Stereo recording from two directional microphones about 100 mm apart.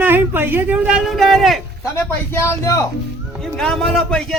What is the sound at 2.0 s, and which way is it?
Speech, 25° left (ahead or behind).